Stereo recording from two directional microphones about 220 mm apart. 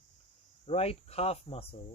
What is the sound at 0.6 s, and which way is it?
Speech, 25° left (ahead or behind).